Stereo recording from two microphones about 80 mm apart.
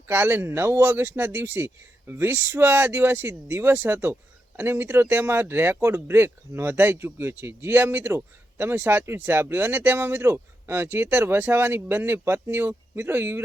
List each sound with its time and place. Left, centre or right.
0.1 s speech: right